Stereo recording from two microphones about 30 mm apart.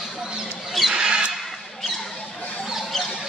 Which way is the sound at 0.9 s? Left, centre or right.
Right.